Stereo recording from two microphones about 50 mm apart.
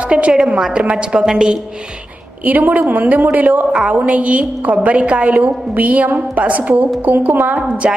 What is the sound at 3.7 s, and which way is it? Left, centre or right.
A woman's voice, centre.